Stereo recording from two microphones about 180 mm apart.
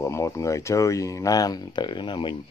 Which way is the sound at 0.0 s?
15° left (ahead or behind).